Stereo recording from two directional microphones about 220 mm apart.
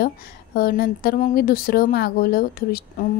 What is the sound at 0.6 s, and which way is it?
Speech, 40° left (ahead or behind).